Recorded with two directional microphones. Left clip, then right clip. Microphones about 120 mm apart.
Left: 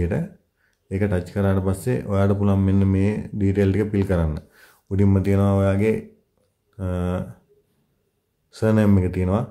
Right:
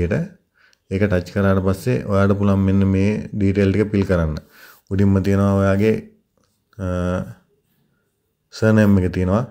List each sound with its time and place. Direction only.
0.0 s speech: 15° right (ahead or behind)
8.5 s speech: 15° right (ahead or behind)